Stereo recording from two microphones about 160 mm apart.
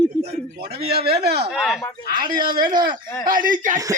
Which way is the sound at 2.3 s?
65° right (ahead or behind).